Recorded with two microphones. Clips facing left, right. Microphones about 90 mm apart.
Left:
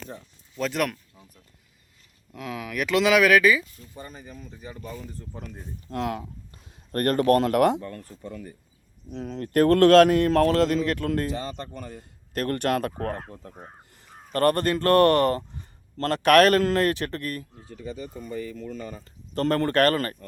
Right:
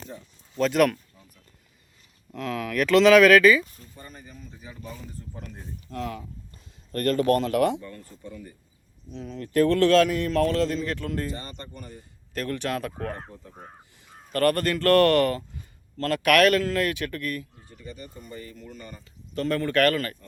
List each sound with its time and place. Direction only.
0.6 s speech: centre (ahead or behind)
2.3 s speech: 10° left (ahead or behind)
5.9 s a man's voice: 70° left (ahead or behind); by 12.0 s 90° left
12.3 s a man's voice: 55° left (ahead or behind)
13.4 s speech: 90° left
14.3 s speech: 25° left (ahead or behind)
15.3 s speech: 35° left (ahead or behind)
19.0 s speech: 45° left (ahead or behind)